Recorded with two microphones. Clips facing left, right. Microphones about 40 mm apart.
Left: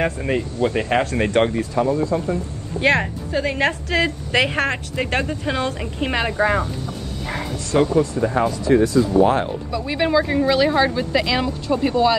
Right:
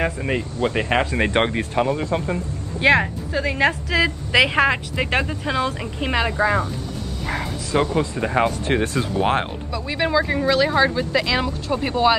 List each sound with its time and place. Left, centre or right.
0.0 s speech: centre
0.6 s speech: right
1.5 s speech: right
3.0 s speech: centre
4.3 s a woman's voice: centre
7.8 s speech: right
9.7 s speech: centre
11.8 s speech: centre